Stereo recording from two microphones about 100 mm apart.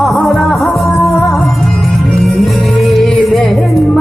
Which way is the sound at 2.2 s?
Centre (ahead or behind).